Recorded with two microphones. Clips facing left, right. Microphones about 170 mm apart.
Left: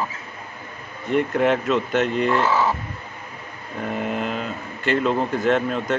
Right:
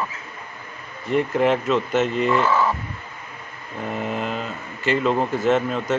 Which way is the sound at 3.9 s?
Centre (ahead or behind).